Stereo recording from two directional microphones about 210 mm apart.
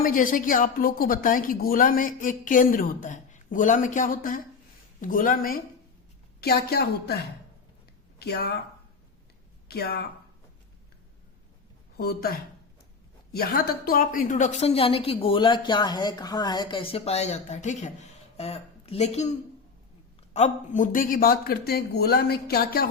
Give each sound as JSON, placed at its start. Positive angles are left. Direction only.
{"t": 0.0, "sound": "a woman's voice", "side_deg": 40}
{"t": 9.6, "sound": "speech", "side_deg": 50}
{"t": 11.9, "sound": "a man's voice", "side_deg": 45}